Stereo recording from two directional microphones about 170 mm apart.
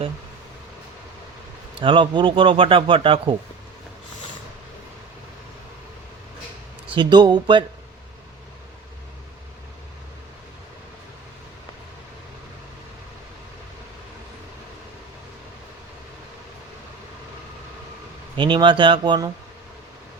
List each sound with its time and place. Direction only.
1.8 s a man's voice: 30° right (ahead or behind)
6.9 s speech: 25° right (ahead or behind)
18.3 s speech: 30° right (ahead or behind)